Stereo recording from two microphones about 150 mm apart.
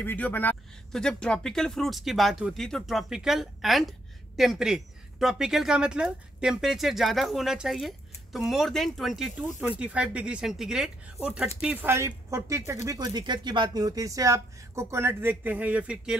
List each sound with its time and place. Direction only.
0.0 s speech: 10° left (ahead or behind); by 16.2 s 10° right (ahead or behind)